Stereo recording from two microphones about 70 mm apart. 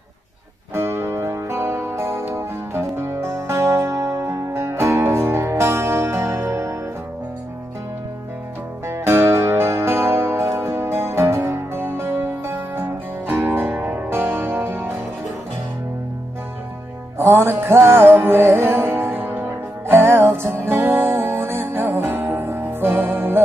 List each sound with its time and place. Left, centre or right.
0.7 s music: right
8.8 s music: right
13.5 s music: right
17.2 s music: right